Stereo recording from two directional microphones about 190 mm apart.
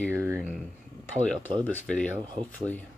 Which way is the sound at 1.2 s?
5° left (ahead or behind).